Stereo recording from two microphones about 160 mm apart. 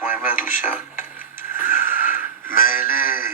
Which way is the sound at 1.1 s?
60° left (ahead or behind).